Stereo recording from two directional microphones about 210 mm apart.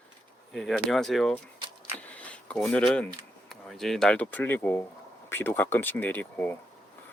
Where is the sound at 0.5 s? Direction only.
Centre (ahead or behind).